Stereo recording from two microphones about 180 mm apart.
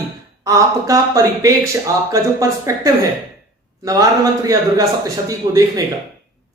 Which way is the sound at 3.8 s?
20° right (ahead or behind).